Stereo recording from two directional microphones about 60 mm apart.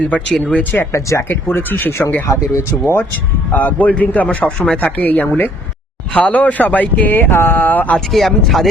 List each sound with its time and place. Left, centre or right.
0.3 s speech: centre
0.6 s a sound: left
1.9 s speech: left
3.5 s a man's voice: left
7.1 s a sound: left
8.1 s speech: centre